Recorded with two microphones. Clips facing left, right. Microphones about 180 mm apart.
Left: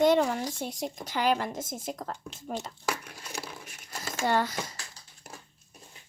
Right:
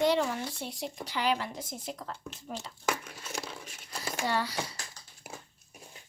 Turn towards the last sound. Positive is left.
turn(degrees=-10)  # may be behind; listen again after turning